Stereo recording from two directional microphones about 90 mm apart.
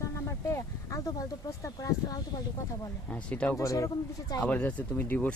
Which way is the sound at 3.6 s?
35° left (ahead or behind).